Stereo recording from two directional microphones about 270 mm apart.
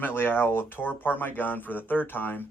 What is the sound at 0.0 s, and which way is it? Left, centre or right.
Speech, centre.